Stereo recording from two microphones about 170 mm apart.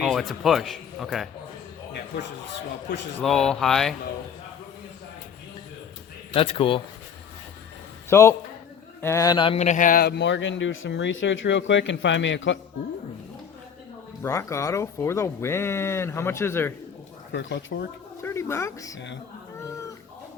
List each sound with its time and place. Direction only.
0.0 s a man's voice: centre (ahead or behind)
3.2 s speech: 5° left (ahead or behind)
6.3 s speech: 30° left (ahead or behind)
8.1 s a man's voice: 15° left (ahead or behind)
9.6 s speech: 50° left (ahead or behind); by 12.5 s 90° left
14.2 s speech: 15° left (ahead or behind)
17.3 s speech: 90° left
18.2 s speech: 15° left (ahead or behind)
18.9 s speech: 90° left
19.5 s cat: 20° left (ahead or behind)